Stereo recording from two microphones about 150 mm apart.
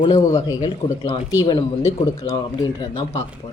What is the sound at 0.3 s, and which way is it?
A woman's voice, 20° left (ahead or behind).